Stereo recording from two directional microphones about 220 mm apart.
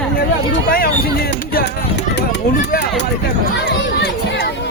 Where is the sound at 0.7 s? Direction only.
45° left (ahead or behind).